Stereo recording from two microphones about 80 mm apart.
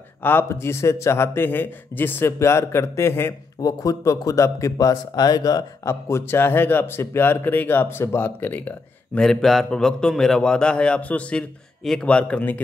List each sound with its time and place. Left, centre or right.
0.2 s speech: left
2.3 s a man's voice: left
3.6 s speech: left
5.9 s speech: left; by 9.2 s centre
9.2 s a man's voice: centre